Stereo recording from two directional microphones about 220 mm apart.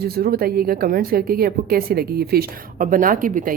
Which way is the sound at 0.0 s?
45° right (ahead or behind).